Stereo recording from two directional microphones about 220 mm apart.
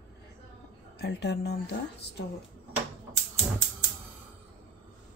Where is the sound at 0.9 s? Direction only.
50° left (ahead or behind).